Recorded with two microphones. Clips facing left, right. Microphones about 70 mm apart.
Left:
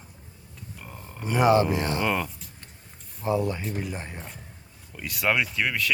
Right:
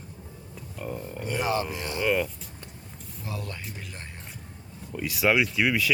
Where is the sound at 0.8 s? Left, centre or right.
Centre.